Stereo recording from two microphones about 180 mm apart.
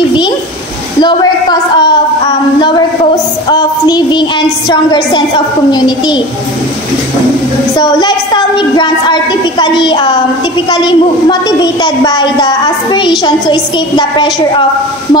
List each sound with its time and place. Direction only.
1.0 s a sound: 25° left (ahead or behind)
3.4 s a woman's voice: 20° left (ahead or behind)
7.8 s a woman's voice: 25° left (ahead or behind)